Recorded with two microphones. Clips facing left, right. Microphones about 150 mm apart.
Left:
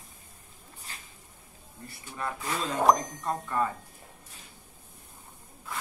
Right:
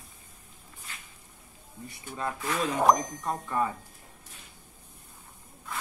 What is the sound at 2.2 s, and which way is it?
Speech, 10° right (ahead or behind).